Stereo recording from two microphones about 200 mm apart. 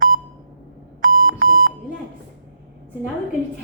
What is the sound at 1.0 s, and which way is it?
Alarm clock, 45° right (ahead or behind).